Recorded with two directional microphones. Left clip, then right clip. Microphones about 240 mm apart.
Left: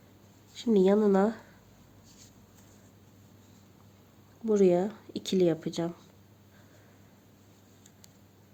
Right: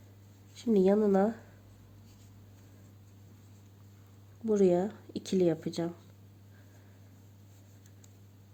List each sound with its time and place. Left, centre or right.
0.5 s speech: centre
4.4 s speech: centre